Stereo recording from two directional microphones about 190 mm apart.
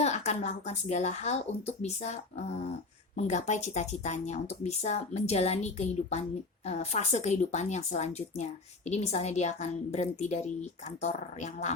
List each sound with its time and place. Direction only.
0.0 s a woman's voice: 35° left (ahead or behind)